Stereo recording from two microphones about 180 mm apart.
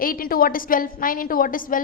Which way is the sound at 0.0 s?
55° left (ahead or behind).